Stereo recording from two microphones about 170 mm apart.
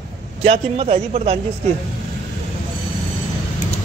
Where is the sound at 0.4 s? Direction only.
35° right (ahead or behind).